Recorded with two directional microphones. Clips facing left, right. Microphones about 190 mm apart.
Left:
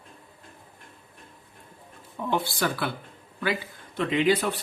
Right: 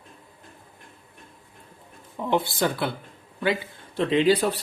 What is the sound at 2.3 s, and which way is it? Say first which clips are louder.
Speech: right 3 dB; 20° right (ahead or behind).